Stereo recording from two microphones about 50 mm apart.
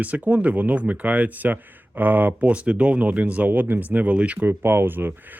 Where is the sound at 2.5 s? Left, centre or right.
Right.